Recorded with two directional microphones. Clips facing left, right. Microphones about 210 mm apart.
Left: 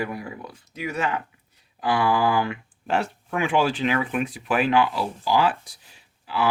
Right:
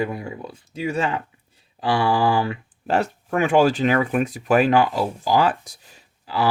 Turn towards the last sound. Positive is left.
turn(degrees=-40)  # may be behind; listen again after turning